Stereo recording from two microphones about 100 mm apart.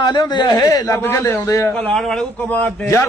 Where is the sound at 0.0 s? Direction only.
45° left (ahead or behind).